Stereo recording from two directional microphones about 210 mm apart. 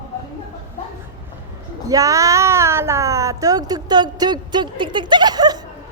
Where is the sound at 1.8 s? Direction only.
15° right (ahead or behind).